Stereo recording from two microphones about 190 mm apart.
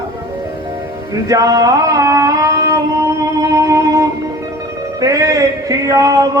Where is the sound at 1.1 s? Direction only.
20° right (ahead or behind).